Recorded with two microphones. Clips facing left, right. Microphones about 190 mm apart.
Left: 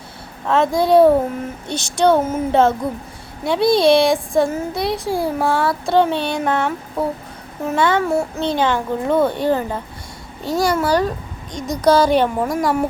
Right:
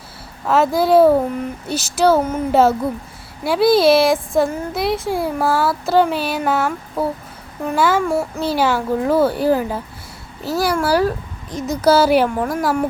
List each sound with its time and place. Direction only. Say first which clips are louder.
0.4 s speech: right 1 dB; 5° right (ahead or behind)